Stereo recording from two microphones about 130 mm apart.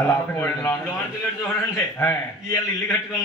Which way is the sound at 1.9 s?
20° left (ahead or behind).